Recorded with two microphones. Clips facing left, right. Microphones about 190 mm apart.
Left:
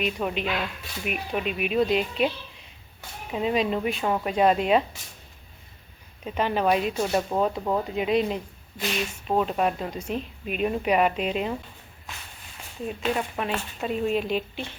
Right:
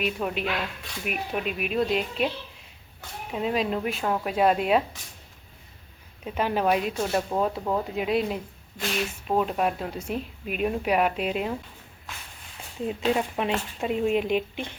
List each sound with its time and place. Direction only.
0.0 s speech: centre (ahead or behind)
3.3 s speech: centre (ahead or behind)
6.2 s speech: 5° right (ahead or behind)
13.1 s speech: 20° right (ahead or behind)